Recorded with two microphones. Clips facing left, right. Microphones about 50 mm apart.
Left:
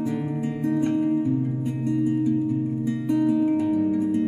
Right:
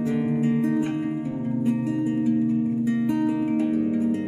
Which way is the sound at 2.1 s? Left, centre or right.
Centre.